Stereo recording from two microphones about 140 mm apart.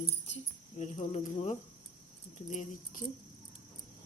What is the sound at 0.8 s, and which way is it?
Speech, 55° left (ahead or behind).